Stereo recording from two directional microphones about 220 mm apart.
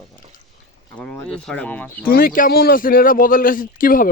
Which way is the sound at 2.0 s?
40° left (ahead or behind).